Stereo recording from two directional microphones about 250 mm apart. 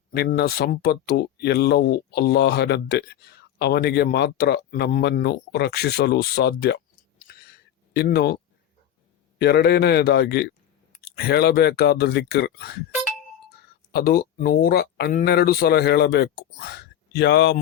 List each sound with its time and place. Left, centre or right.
0.1 s speech: left
7.5 s a sound: left
9.4 s speech: left
13.9 s speech: left